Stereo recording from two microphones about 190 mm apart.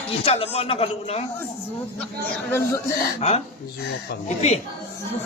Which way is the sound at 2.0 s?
10° left (ahead or behind).